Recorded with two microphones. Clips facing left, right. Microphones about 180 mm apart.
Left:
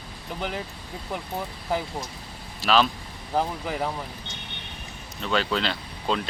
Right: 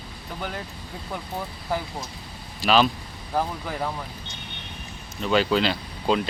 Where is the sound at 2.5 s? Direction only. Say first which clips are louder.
Right 2 dB; centre (ahead or behind).